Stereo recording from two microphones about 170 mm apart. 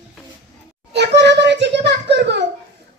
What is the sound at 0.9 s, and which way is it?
A child's voice, 90° right.